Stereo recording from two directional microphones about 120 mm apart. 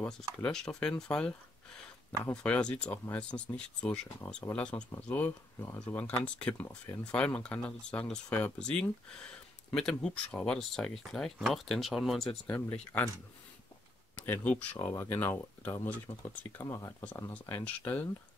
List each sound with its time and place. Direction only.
0.4 s speech: 5° left (ahead or behind)
12.4 s speech: 15° left (ahead or behind)
14.1 s speech: 15° left (ahead or behind)
16.1 s speech: 65° left (ahead or behind)
16.5 s speech: 25° left (ahead or behind)
17.6 s speech: 15° left (ahead or behind)